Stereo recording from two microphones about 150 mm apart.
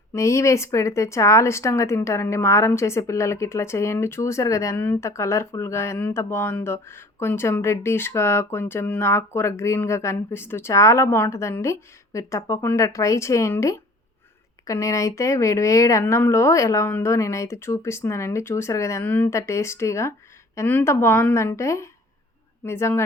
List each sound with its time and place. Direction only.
0.1 s a woman's voice: 20° left (ahead or behind)